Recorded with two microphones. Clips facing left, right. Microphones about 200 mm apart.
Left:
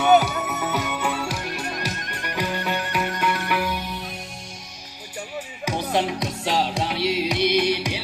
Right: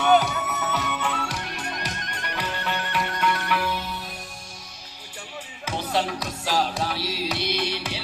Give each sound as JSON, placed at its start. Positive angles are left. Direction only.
{"t": 0.0, "sound": "music", "side_deg": 10}
{"t": 5.6, "sound": "music", "side_deg": 15}